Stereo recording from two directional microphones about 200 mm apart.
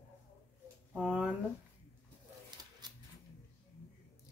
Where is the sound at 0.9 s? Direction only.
5° right (ahead or behind).